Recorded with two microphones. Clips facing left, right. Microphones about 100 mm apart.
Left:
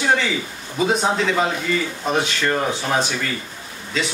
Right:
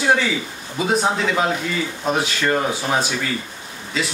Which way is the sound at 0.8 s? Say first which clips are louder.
Even; 5° right (ahead or behind).